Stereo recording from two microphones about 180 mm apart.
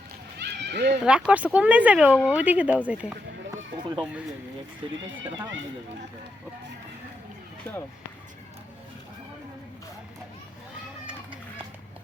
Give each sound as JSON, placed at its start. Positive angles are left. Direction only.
{"t": 0.3, "sound": "run", "side_deg": -70}
{"t": 1.0, "sound": "speech", "side_deg": -5}